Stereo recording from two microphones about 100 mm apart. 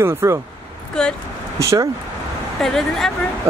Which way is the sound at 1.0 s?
5° left (ahead or behind).